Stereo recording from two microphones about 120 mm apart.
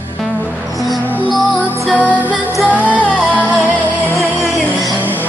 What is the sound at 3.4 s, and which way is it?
Music, 10° right (ahead or behind).